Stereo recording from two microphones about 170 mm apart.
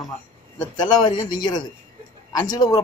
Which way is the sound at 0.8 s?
25° left (ahead or behind).